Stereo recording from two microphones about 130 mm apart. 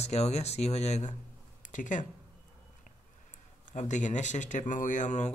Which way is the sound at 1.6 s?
80° left.